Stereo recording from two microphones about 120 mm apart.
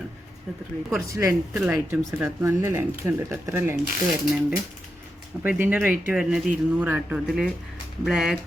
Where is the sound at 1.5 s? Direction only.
5° right (ahead or behind).